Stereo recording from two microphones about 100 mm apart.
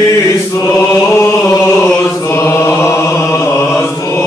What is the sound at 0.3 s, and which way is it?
Chant, 25° left (ahead or behind).